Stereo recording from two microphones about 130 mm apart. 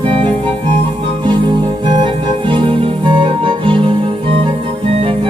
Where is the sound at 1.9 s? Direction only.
40° right (ahead or behind).